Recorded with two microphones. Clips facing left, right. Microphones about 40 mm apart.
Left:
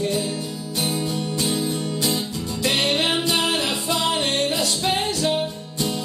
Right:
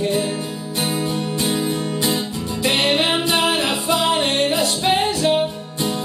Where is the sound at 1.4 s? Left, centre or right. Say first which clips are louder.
Right 3 dB; right.